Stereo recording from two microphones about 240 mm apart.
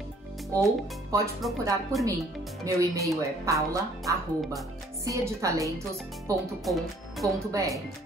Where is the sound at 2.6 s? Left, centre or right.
Centre.